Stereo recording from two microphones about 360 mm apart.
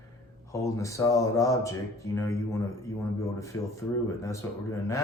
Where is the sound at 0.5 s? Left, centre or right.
Centre.